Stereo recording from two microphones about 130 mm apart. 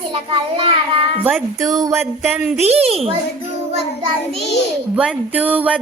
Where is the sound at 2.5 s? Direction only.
55° right (ahead or behind).